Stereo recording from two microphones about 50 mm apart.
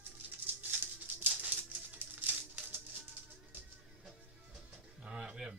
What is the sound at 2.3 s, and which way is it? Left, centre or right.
Music, right.